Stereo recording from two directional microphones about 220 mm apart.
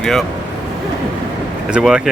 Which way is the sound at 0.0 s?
Centre (ahead or behind).